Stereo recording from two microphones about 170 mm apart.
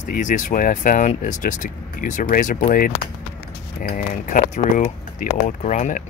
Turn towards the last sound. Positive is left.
turn(degrees=50)  # may be behind; listen again after turning